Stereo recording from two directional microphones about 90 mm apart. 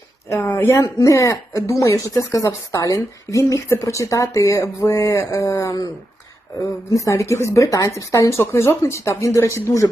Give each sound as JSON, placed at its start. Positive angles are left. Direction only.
{"t": 0.6, "sound": "speech", "side_deg": 40}
{"t": 6.9, "sound": "speech", "side_deg": 35}